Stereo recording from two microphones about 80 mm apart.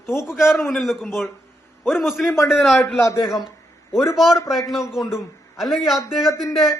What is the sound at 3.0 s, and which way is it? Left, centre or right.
Speech, left.